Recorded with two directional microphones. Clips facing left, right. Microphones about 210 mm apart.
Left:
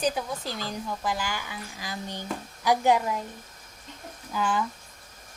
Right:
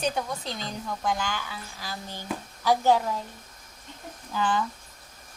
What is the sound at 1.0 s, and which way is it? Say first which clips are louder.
A woman's voice: right 4 dB; 5° left (ahead or behind).